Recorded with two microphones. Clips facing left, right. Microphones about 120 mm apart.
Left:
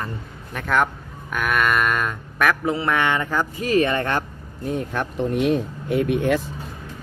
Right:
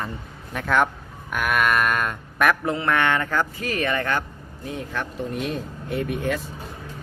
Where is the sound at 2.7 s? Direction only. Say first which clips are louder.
Left 1 dB; 10° left (ahead or behind).